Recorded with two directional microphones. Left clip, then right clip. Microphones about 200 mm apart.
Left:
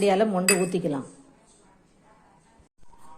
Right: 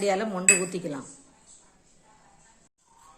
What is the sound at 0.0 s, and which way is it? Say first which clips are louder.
Speech: left 4 dB; 10° left (ahead or behind).